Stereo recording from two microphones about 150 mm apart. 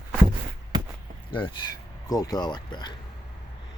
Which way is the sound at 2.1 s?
25° left (ahead or behind).